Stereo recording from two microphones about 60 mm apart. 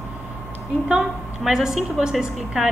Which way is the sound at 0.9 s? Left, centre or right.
Centre.